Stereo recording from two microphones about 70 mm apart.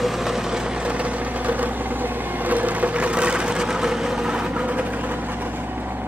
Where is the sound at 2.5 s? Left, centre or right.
Right.